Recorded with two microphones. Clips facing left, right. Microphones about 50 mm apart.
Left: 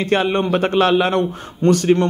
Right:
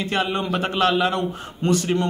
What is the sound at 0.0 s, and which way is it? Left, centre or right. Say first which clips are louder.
A man's voice: left 6 dB; left.